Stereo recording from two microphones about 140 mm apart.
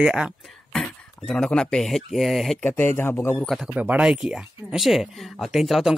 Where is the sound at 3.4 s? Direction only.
Centre (ahead or behind).